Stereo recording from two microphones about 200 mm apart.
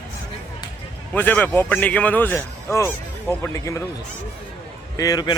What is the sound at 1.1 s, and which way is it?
Speech, 10° left (ahead or behind).